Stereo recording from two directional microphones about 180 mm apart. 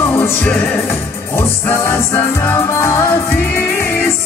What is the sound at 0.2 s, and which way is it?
Music, 10° left (ahead or behind).